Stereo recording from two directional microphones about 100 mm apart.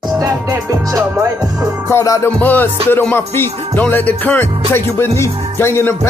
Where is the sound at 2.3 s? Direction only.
20° left (ahead or behind).